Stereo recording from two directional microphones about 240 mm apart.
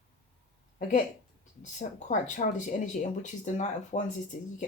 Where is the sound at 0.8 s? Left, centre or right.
Left.